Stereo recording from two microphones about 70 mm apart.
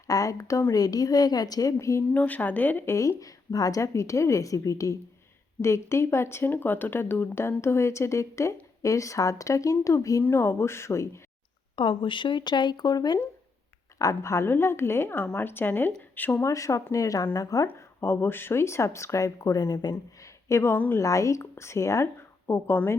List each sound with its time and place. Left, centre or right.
0.1 s speech: left
0.7 s a woman's voice: left
2.1 s speech: left
2.9 s speech: left
10.2 s speech: left
12.4 s speech: left
14.0 s speech: left
16.4 s a woman's voice: left
17.7 s speech: left
20.7 s speech: left
21.0 s speech: left